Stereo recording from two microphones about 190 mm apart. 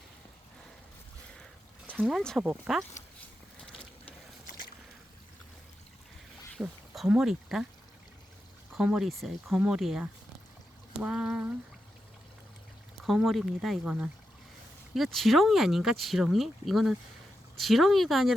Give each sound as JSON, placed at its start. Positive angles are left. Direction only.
{"t": 2.0, "sound": "speech", "side_deg": -5}
{"t": 4.4, "sound": "boat", "side_deg": 45}
{"t": 6.6, "sound": "speech", "side_deg": -5}
{"t": 8.7, "sound": "speech", "side_deg": -5}
{"t": 13.0, "sound": "speech", "side_deg": 0}